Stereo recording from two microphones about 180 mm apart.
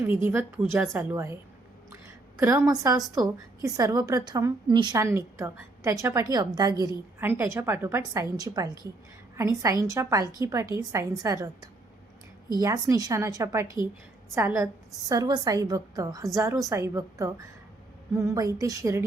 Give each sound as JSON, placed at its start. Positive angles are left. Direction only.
{"t": 0.0, "sound": "a woman's voice", "side_deg": -10}
{"t": 1.9, "sound": "a sound", "side_deg": -15}
{"t": 3.2, "sound": "a woman's voice", "side_deg": -20}